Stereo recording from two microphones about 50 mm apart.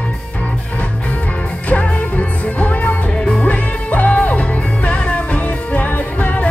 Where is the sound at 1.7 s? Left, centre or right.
Left.